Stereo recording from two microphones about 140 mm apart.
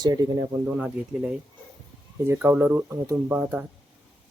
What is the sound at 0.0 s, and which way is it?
Speech, 25° right (ahead or behind).